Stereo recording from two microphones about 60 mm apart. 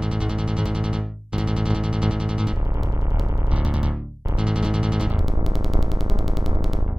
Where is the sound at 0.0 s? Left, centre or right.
Centre.